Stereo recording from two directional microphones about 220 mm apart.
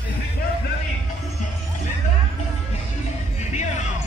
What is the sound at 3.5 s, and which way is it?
Music, 30° left (ahead or behind).